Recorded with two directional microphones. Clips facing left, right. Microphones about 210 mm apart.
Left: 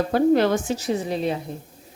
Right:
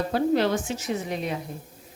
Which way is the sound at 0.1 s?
50° left (ahead or behind).